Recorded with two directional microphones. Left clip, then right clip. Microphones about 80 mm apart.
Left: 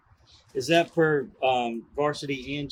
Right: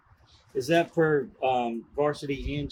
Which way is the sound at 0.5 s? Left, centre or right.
Left.